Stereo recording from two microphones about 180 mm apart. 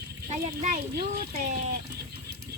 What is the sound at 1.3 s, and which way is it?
Speech, 45° right (ahead or behind).